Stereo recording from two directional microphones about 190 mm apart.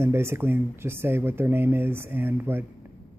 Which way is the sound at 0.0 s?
15° right (ahead or behind).